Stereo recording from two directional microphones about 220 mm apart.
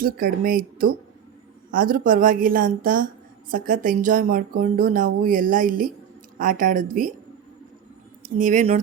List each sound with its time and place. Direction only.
0.0 s speech: 40° right (ahead or behind)
8.2 s speech: 35° right (ahead or behind)